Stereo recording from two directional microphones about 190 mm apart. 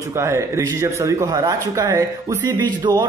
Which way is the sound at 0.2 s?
15° right (ahead or behind).